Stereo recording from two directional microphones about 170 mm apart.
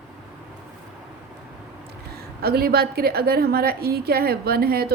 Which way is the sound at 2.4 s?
65° right (ahead or behind).